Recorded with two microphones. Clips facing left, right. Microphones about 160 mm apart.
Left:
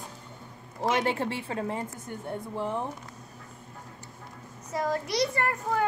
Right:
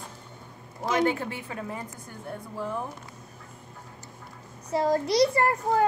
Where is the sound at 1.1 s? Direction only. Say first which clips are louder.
Even; 30° left (ahead or behind).